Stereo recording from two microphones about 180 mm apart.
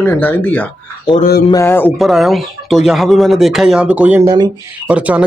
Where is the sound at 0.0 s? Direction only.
10° left (ahead or behind).